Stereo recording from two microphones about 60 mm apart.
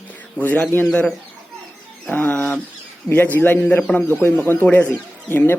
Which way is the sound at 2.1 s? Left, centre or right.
Left.